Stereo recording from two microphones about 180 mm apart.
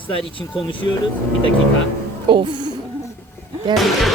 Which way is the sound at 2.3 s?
25° right (ahead or behind).